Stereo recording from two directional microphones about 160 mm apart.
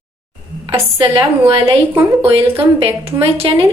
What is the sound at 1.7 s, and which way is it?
A woman's voice, 15° right (ahead or behind).